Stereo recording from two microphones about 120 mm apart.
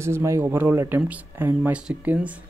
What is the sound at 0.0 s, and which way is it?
Speech, 25° right (ahead or behind).